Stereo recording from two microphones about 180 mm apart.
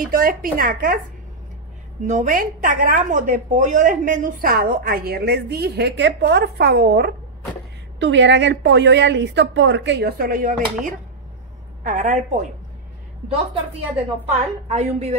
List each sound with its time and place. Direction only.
0.0 s a woman's voice: 50° right (ahead or behind)
2.0 s a woman's voice: 45° right (ahead or behind)
8.0 s a woman's voice: 85° right; by 12.2 s 45° right (ahead or behind)
13.9 s a woman's voice: 35° right (ahead or behind)